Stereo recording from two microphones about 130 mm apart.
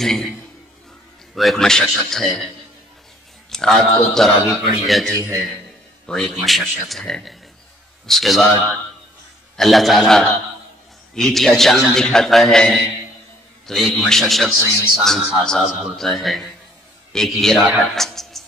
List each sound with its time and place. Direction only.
0.0 s a man's voice: 5° left (ahead or behind)
1.3 s a man's voice: centre (ahead or behind)
9.6 s a man's voice: centre (ahead or behind)